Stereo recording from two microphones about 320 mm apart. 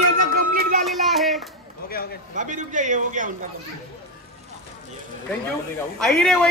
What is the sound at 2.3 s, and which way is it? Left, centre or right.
Speech, right.